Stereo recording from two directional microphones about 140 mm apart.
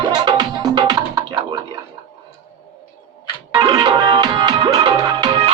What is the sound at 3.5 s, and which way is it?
Music, 30° right (ahead or behind).